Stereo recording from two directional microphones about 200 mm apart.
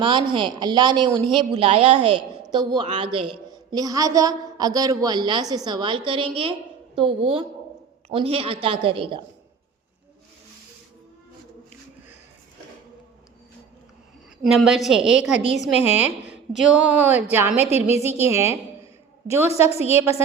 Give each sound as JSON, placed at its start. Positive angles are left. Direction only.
{"t": 0.0, "sound": "a woman's voice", "side_deg": -25}
{"t": 14.4, "sound": "a woman's voice", "side_deg": -5}
{"t": 15.4, "sound": "a woman's voice", "side_deg": 35}
{"t": 16.0, "sound": "speech", "side_deg": -5}
{"t": 17.9, "sound": "a woman's voice", "side_deg": 30}
{"t": 18.2, "sound": "speech", "side_deg": -15}
{"t": 19.7, "sound": "a woman's voice", "side_deg": 30}